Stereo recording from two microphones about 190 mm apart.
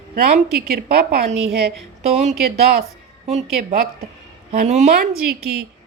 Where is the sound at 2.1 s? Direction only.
35° right (ahead or behind).